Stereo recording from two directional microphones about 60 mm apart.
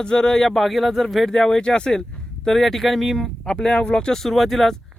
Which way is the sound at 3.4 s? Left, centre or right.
Centre.